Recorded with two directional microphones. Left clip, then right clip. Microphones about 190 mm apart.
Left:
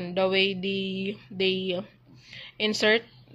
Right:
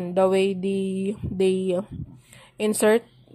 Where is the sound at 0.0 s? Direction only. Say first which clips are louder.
Right 4 dB; 35° right (ahead or behind).